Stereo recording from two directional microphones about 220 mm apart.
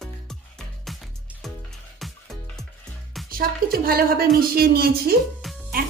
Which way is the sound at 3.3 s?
40° right (ahead or behind).